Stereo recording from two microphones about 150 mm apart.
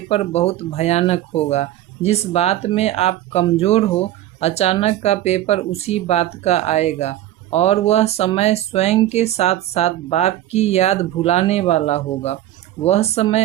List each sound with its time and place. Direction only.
0.1 s speech: 45° left (ahead or behind)